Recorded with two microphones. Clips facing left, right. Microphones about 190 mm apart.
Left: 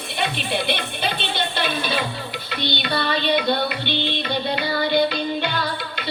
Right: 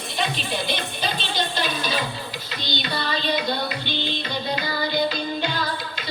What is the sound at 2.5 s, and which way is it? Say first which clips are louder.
Music: left 5 dB; 60° left (ahead or behind).